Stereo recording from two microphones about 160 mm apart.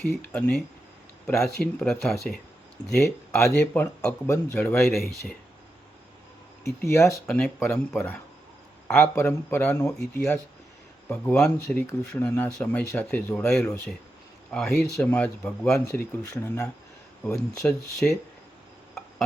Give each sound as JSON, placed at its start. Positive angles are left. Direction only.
{"t": 0.0, "sound": "speech", "side_deg": 5}
{"t": 1.8, "sound": "speech", "side_deg": 5}
{"t": 6.7, "sound": "speech", "side_deg": 20}
{"t": 7.3, "sound": "speech", "side_deg": 5}